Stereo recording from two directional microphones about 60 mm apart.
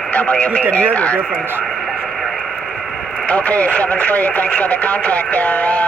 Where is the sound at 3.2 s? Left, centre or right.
Left.